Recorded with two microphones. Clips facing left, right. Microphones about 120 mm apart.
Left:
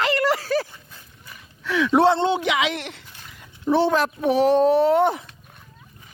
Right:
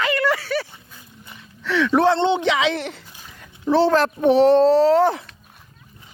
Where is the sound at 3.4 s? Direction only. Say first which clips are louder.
Right 2 dB; 15° left (ahead or behind).